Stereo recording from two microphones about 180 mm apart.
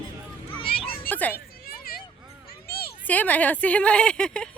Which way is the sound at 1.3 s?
55° left (ahead or behind).